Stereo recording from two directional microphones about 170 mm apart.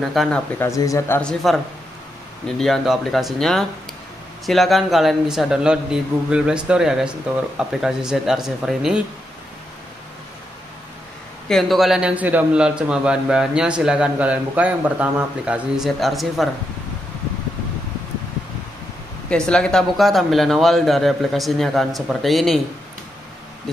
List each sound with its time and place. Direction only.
0.0 s a man's voice: centre (ahead or behind)
0.6 s speech: 20° left (ahead or behind)
2.4 s a man's voice: centre (ahead or behind)
11.4 s a man's voice: centre (ahead or behind)
19.2 s a man's voice: 5° left (ahead or behind)